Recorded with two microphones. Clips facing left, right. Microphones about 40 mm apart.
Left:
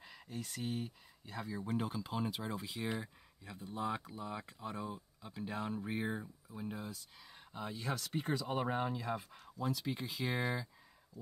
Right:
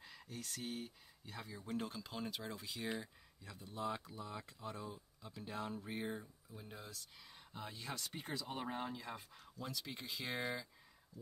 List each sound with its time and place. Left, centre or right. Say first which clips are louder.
0.0 s speech: left 4 dB; centre